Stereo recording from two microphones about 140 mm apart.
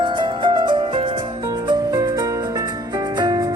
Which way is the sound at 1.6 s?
25° right (ahead or behind).